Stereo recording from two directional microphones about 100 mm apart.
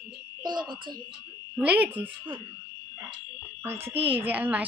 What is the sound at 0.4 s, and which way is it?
Speech, 50° right (ahead or behind).